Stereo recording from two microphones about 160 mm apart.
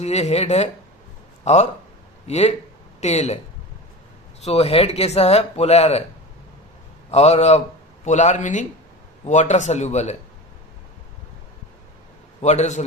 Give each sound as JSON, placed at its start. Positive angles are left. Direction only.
{"t": 0.0, "sound": "a man's voice", "side_deg": 40}
{"t": 4.4, "sound": "speech", "side_deg": 40}
{"t": 7.1, "sound": "a man's voice", "side_deg": 40}
{"t": 12.4, "sound": "a man's voice", "side_deg": 45}